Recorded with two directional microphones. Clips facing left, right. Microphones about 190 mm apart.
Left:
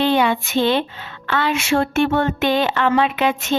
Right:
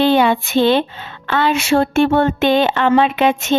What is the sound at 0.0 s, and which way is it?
Speech, 30° right (ahead or behind).